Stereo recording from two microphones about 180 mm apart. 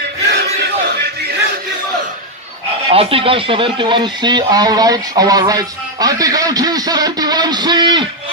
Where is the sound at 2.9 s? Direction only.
30° right (ahead or behind).